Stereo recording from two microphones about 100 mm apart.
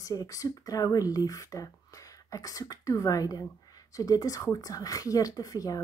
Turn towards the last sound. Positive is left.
turn(degrees=35)  # may be behind; listen again after turning